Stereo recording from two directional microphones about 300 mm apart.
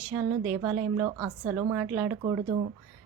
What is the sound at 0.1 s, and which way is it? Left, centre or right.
A woman's voice, centre.